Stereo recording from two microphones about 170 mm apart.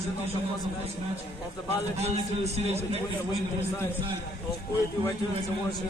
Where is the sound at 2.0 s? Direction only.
40° right (ahead or behind).